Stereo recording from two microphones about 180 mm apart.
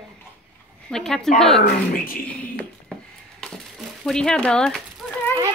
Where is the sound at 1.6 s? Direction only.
55° left (ahead or behind).